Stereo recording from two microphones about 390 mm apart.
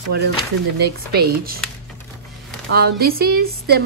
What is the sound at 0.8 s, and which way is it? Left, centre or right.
Speech, right.